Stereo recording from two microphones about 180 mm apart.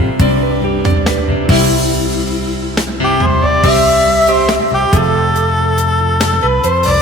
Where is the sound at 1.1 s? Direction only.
Centre (ahead or behind).